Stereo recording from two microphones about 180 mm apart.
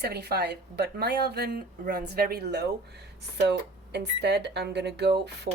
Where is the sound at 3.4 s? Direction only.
70° right (ahead or behind).